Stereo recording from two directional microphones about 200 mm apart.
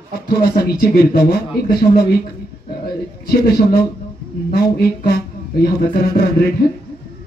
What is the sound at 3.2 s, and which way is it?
Speech, 50° left (ahead or behind).